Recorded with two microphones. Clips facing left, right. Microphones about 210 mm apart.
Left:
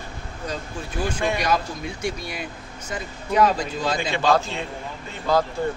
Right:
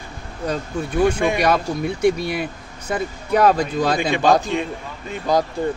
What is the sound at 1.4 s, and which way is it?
Speech, 60° right (ahead or behind).